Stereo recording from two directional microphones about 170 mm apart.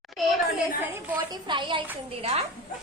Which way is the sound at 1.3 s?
25° right (ahead or behind).